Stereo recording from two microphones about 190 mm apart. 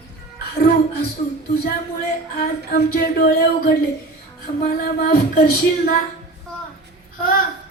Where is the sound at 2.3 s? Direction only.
55° left (ahead or behind).